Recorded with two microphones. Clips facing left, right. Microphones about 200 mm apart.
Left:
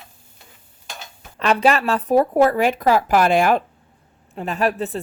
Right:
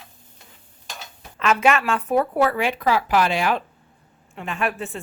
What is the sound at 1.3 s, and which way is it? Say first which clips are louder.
A woman's voice: left 2 dB; 35° left (ahead or behind).